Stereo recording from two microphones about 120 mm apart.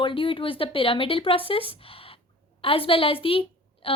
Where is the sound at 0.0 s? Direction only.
45° left (ahead or behind).